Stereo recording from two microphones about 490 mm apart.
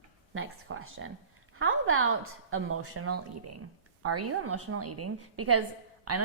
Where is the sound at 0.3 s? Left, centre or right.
Right.